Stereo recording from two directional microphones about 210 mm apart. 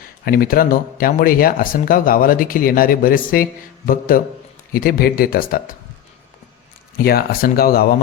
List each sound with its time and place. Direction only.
0.0 s speech: 45° left (ahead or behind)
6.9 s speech: 45° left (ahead or behind)